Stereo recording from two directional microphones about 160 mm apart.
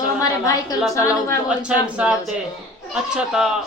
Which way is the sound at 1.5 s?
5° right (ahead or behind).